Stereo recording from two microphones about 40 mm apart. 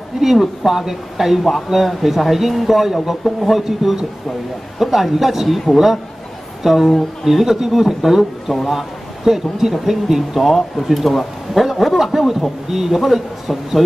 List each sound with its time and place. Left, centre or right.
0.2 s a man's voice: centre
3.6 s a man's voice: centre